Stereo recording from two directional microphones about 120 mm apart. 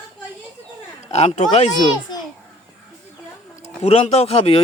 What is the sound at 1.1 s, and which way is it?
Speech, 65° left (ahead or behind).